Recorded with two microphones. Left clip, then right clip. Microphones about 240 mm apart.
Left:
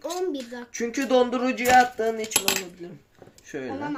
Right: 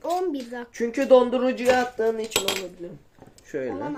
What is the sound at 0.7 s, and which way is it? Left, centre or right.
Speech, centre.